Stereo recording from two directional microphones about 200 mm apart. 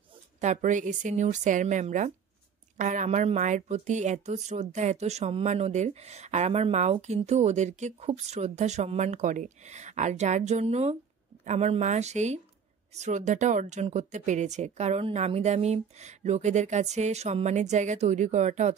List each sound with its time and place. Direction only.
0.4 s speech: 35° right (ahead or behind)